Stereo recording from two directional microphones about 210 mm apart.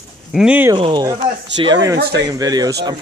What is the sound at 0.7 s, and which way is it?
Speech, 25° right (ahead or behind).